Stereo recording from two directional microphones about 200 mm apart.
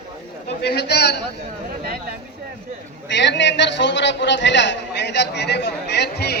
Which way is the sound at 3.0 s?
60° left (ahead or behind).